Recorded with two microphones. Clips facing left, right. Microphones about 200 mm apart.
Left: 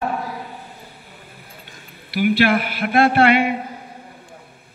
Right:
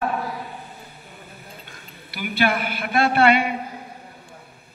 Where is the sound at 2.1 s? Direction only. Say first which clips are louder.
Left 6 dB; 55° left (ahead or behind).